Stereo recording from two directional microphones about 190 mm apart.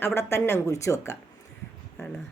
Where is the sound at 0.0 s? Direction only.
15° left (ahead or behind).